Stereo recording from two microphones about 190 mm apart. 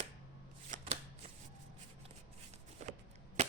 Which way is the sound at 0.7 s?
40° right (ahead or behind).